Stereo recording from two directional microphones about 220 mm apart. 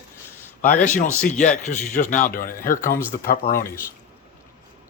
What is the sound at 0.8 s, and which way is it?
Speech, 35° left (ahead or behind).